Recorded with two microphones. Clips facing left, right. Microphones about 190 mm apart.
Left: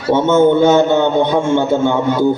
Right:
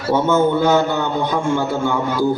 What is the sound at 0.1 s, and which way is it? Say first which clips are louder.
Mantra: left 5 dB; 25° left (ahead or behind).